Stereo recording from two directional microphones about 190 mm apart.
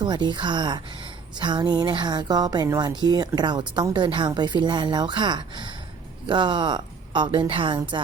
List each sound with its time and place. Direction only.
0.0 s speech: 25° right (ahead or behind)